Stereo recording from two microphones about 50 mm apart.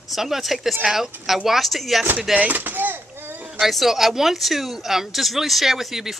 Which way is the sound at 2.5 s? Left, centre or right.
Right.